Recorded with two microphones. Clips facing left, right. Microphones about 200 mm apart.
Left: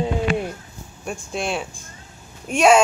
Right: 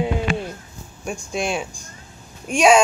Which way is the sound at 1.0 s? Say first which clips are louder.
Right 2 dB; centre (ahead or behind).